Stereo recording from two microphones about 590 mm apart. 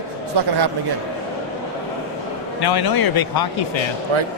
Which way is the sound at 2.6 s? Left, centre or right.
Left.